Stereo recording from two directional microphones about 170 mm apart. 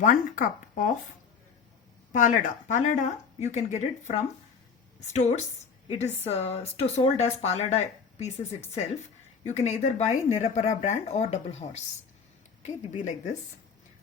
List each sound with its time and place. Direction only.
0.0 s speech: 50° left (ahead or behind)
2.1 s a woman's voice: 50° left (ahead or behind)
9.5 s speech: 40° left (ahead or behind)